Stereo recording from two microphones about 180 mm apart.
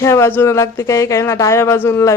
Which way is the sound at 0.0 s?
15° left (ahead or behind).